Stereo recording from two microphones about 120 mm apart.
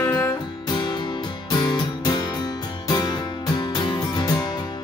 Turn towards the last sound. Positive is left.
turn(degrees=40)  # may be behind; listen again after turning